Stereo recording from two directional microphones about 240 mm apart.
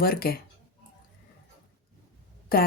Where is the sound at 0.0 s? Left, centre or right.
Left.